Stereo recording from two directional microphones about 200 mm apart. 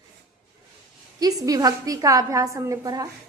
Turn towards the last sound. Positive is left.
turn(degrees=-20)  # may be behind; listen again after turning